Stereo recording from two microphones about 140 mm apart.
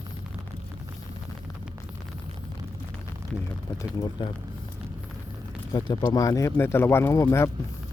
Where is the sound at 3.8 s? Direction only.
30° left (ahead or behind).